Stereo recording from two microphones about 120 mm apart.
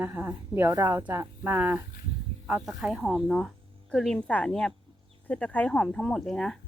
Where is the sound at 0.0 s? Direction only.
15° right (ahead or behind).